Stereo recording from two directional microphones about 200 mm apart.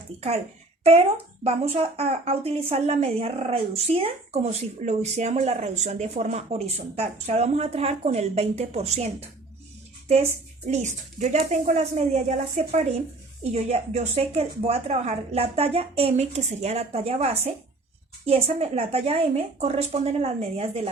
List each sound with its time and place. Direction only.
1.5 s a woman's voice: 30° right (ahead or behind)
10.7 s a woman's voice: 35° right (ahead or behind)